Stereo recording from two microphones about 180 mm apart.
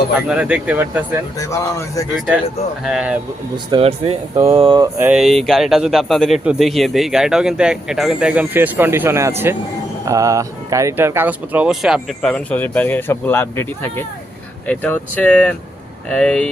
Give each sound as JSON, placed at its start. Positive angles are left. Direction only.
{"t": 0.3, "sound": "speech", "side_deg": -5}
{"t": 1.4, "sound": "speech", "side_deg": 15}
{"t": 2.1, "sound": "a man's voice", "side_deg": -5}
{"t": 3.7, "sound": "speech", "side_deg": -30}
{"t": 4.9, "sound": "a man's voice", "side_deg": -5}